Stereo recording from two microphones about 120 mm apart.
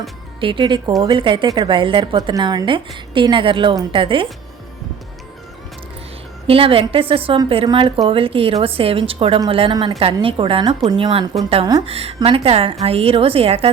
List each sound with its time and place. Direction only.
0.3 s a woman's voice: 45° right (ahead or behind)
6.5 s a woman's voice: 50° right (ahead or behind)
11.9 s a woman's voice: 55° right (ahead or behind)